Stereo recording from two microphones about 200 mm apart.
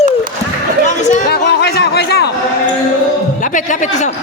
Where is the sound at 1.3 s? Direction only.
55° left (ahead or behind).